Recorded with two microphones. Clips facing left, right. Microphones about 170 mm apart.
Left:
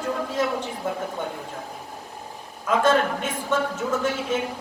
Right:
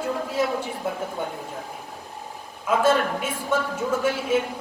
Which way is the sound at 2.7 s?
10° right (ahead or behind).